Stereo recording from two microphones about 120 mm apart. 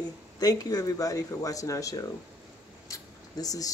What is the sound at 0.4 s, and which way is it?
Speech, 30° left (ahead or behind).